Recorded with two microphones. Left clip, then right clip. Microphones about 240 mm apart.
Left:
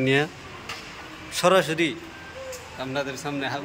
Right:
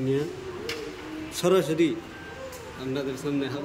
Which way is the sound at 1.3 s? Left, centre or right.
Centre.